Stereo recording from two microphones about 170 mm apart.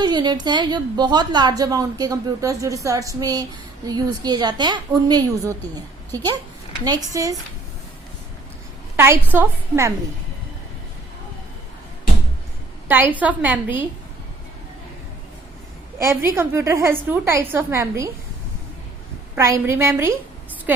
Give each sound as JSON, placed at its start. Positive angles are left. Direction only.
{"t": 0.0, "sound": "a woman's voice", "side_deg": -25}
{"t": 9.0, "sound": "a woman's voice", "side_deg": -10}
{"t": 12.9, "sound": "a woman's voice", "side_deg": -10}
{"t": 16.0, "sound": "a woman's voice", "side_deg": -15}
{"t": 19.4, "sound": "a woman's voice", "side_deg": -15}